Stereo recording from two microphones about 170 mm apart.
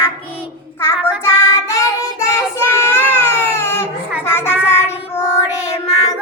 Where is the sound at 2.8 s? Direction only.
15° left (ahead or behind).